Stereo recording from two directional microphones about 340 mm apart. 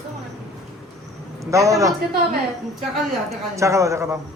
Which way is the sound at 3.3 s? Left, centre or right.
Centre.